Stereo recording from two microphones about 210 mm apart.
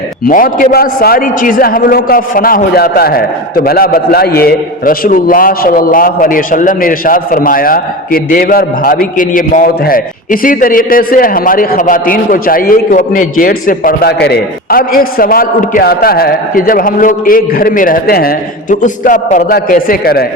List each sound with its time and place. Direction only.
0.3 s a man's voice: 40° left (ahead or behind)